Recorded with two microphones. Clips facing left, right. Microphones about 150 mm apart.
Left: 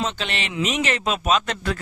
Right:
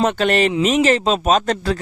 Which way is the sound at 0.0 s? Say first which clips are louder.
Right 11 dB; 50° right (ahead or behind).